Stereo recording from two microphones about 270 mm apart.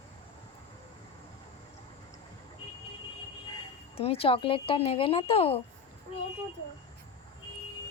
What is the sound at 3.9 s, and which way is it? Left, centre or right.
Speech, left.